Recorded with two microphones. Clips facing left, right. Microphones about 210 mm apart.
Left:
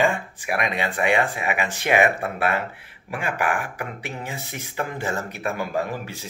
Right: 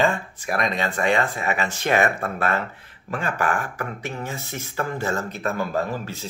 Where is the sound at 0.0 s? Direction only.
15° left (ahead or behind).